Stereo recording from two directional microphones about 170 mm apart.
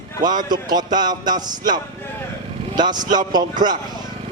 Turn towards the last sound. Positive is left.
turn(degrees=-25)  # may be behind; listen again after turning